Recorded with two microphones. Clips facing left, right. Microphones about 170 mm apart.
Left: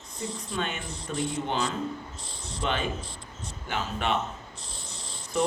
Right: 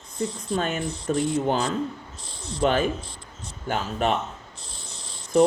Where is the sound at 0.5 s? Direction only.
40° right (ahead or behind).